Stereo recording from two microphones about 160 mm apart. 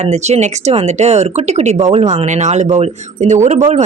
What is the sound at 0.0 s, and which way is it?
A woman's voice, 45° right (ahead or behind).